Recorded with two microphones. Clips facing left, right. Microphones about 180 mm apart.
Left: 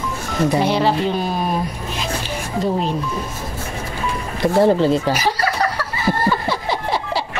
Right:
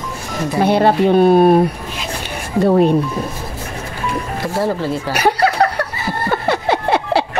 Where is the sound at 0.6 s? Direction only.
55° right (ahead or behind).